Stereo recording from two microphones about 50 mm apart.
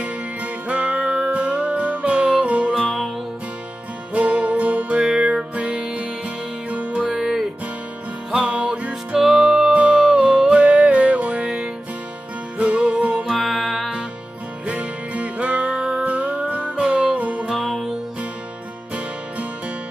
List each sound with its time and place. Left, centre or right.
0.7 s music: right
4.1 s music: right
7.1 s music: centre
8.3 s music: centre
9.2 s music: centre
9.8 s music: right
12.5 s music: right
13.3 s music: centre
14.7 s music: right
17.6 s music: centre